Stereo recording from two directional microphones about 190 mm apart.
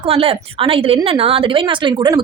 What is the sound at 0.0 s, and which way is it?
A woman's voice, 30° right (ahead or behind).